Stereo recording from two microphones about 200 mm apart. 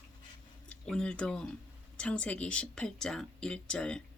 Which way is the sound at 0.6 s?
5° left (ahead or behind).